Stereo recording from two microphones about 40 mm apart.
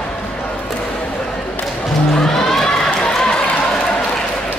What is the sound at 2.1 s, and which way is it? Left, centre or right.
Music, centre.